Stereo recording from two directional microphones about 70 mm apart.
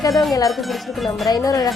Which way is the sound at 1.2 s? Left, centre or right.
Left.